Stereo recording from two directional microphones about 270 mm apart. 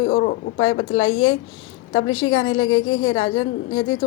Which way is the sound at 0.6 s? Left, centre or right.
Left.